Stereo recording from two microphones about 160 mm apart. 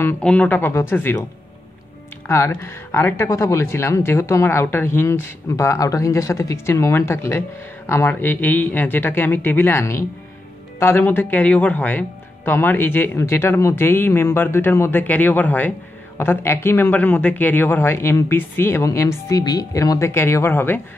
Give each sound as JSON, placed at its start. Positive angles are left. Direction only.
{"t": 0.0, "sound": "speech", "side_deg": 5}
{"t": 2.2, "sound": "speech", "side_deg": 15}